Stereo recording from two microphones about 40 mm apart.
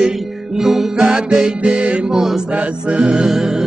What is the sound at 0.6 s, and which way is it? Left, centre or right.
Music, centre.